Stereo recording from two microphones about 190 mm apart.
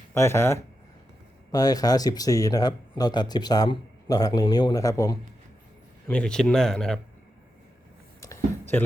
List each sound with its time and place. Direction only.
0.1 s speech: 15° left (ahead or behind)
6.1 s speech: 5° left (ahead or behind)
8.2 s a sound: 15° left (ahead or behind)